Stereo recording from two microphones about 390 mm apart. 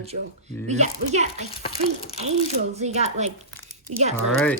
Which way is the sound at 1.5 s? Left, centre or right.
Centre.